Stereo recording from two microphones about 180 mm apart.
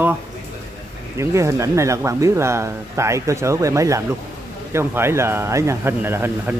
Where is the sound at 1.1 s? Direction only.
15° right (ahead or behind).